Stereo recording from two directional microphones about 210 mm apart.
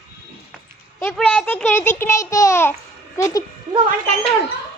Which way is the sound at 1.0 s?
5° left (ahead or behind).